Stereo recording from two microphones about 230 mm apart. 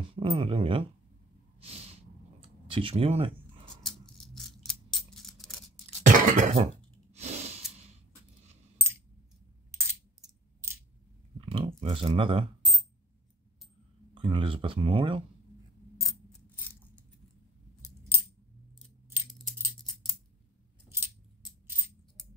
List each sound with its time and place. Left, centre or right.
0.1 s speech: right
1.6 s snort: right
2.7 s speech: right
3.8 s a sound: centre
6.0 s cough: right
9.7 s coin: centre
11.4 s a sound: right
14.1 s speech: right
19.3 s scissors: centre
20.9 s coin: centre